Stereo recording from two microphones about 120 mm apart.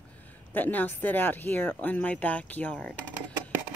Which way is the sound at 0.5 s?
15° left (ahead or behind).